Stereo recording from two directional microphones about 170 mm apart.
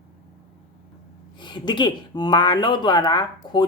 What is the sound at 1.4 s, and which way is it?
Speech, 25° left (ahead or behind).